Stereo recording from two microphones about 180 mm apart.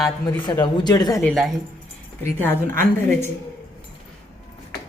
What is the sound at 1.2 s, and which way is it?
Speech, centre (ahead or behind).